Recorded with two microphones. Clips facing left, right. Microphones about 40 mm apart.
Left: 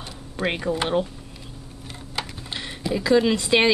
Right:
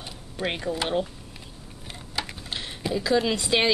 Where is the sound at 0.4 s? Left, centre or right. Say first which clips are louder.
Left 4 dB; centre.